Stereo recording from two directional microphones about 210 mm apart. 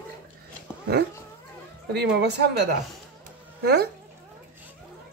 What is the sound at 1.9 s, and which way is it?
Speech, 55° right (ahead or behind).